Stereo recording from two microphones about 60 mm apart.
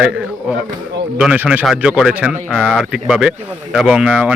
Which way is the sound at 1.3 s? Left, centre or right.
Right.